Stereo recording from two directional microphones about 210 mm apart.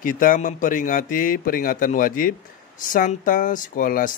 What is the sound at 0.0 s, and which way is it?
Speech, 40° left (ahead or behind).